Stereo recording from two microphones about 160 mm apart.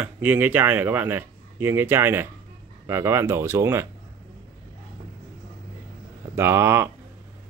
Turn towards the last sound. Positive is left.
turn(degrees=-15)  # may be behind; listen again after turning